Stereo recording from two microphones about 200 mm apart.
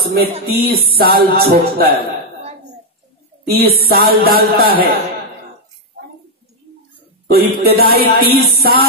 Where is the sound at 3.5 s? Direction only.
50° right (ahead or behind).